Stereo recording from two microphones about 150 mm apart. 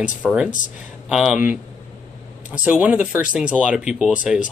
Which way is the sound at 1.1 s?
5° right (ahead or behind).